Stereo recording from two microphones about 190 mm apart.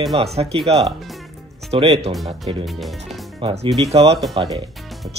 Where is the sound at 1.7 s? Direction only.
30° right (ahead or behind).